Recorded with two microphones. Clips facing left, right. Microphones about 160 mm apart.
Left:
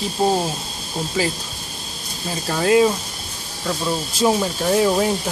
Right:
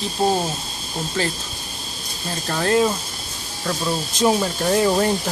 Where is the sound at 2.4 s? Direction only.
5° left (ahead or behind).